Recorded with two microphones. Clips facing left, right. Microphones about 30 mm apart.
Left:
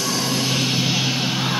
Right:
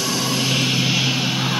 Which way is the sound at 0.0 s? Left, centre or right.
Right.